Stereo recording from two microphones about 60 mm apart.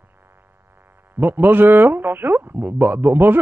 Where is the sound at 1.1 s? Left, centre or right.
Right.